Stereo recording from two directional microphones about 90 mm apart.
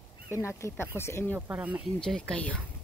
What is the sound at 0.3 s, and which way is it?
Speech, 30° left (ahead or behind).